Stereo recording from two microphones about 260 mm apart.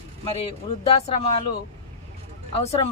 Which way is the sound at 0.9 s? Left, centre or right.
Left.